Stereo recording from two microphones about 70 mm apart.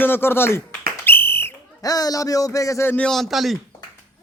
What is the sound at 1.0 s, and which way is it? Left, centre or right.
Whistle, left.